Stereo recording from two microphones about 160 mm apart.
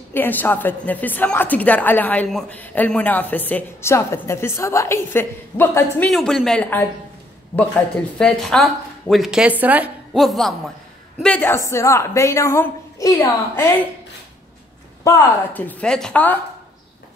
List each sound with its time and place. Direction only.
0.1 s a woman's voice: 10° left (ahead or behind)
6.0 s speech: centre (ahead or behind)
8.2 s a woman's voice: 5° left (ahead or behind)
15.0 s a woman's voice: 10° left (ahead or behind)